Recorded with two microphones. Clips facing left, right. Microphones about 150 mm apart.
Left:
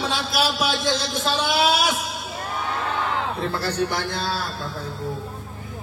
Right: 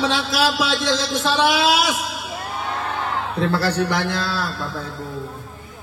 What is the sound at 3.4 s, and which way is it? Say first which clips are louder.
A man's voice: right 8 dB; 80° right.